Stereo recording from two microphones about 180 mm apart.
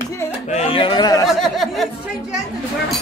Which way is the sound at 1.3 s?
Centre (ahead or behind).